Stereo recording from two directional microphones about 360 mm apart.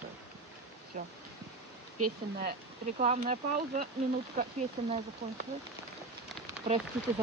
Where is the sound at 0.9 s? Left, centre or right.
Centre.